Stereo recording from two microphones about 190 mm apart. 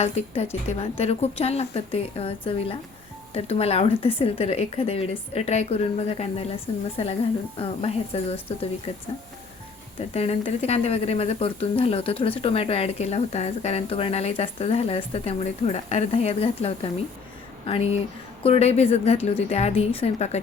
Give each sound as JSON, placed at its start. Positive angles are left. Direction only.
{"t": 0.0, "sound": "speech", "side_deg": 35}
{"t": 10.2, "sound": "speech", "side_deg": 30}